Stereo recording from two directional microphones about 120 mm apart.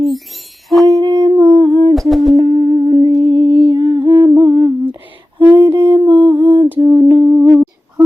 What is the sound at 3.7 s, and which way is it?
Humming, 30° right (ahead or behind).